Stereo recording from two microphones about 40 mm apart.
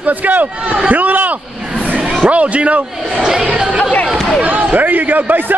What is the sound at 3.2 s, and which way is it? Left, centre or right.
Speech, centre.